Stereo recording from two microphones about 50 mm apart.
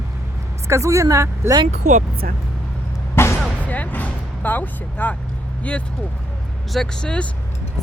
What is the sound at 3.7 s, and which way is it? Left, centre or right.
Music, left.